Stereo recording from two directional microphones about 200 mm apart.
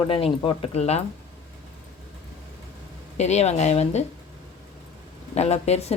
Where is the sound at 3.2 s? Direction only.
35° left (ahead or behind).